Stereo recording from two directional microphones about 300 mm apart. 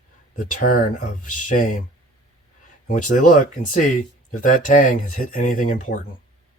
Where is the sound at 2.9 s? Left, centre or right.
Left.